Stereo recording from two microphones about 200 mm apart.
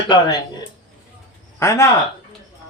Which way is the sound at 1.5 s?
15° left (ahead or behind).